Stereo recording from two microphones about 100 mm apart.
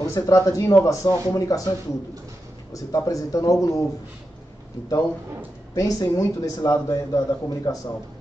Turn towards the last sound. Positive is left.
turn(degrees=35)  # may be behind; listen again after turning